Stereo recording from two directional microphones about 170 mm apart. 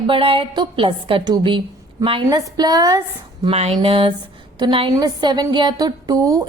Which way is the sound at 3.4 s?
35° right (ahead or behind).